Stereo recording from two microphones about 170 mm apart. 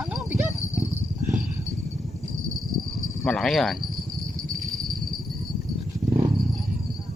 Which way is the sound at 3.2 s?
Centre (ahead or behind).